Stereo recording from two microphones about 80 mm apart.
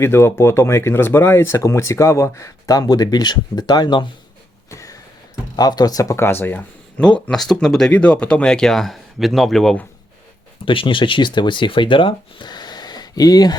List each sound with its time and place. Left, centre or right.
0.0 s speech: left
4.7 s a sound: left
5.5 s speech: left
7.3 s speech: centre
7.9 s speech: centre
10.7 s speech: left